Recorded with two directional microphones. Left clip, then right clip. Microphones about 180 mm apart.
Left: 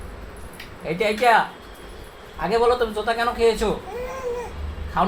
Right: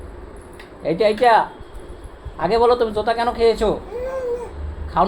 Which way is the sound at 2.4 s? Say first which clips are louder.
Right 3 dB; 40° right (ahead or behind).